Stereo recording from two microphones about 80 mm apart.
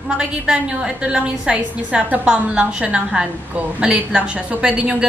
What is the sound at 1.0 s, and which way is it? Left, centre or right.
Music, centre.